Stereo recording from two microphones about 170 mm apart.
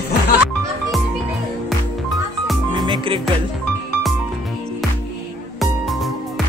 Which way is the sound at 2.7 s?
25° right (ahead or behind).